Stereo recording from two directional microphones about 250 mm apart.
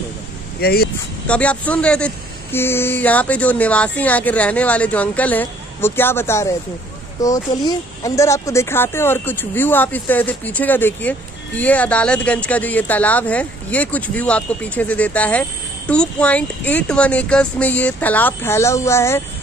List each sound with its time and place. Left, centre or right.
0.6 s speech: left
1.2 s speech: centre